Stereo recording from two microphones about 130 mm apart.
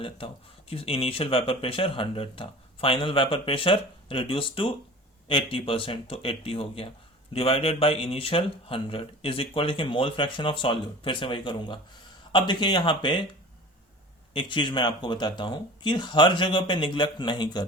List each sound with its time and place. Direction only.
0.7 s speech: 45° left (ahead or behind)
14.3 s speech: 40° left (ahead or behind)